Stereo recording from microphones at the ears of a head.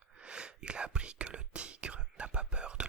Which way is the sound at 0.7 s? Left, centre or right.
Right.